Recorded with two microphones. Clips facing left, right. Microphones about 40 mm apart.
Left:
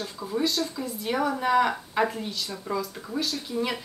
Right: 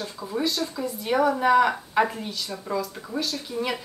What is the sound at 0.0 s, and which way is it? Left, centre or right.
A woman's voice, centre.